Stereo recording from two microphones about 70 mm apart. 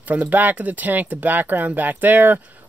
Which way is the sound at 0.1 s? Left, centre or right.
Right.